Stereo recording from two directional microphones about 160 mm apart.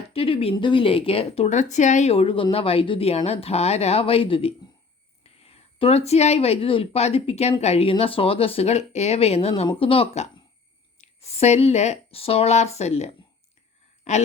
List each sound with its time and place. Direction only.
0.1 s speech: 35° left (ahead or behind)